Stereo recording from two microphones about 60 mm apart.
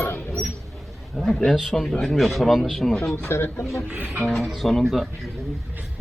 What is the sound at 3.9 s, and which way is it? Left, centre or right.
Speech, right.